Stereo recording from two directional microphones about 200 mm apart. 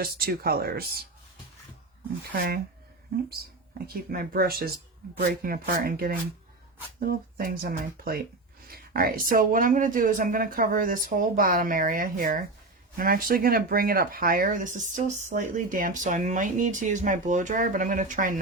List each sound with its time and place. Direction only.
0.0 s speech: 50° right (ahead or behind)
3.8 s speech: 50° right (ahead or behind)